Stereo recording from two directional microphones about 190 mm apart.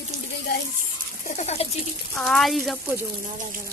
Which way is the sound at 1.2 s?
35° left (ahead or behind).